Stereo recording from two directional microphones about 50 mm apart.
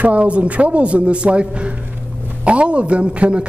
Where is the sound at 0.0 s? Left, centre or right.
Right.